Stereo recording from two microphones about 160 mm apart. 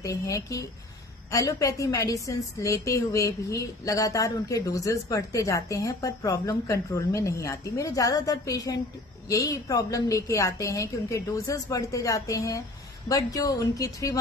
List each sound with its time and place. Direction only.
0.0 s a woman's voice: 20° left (ahead or behind)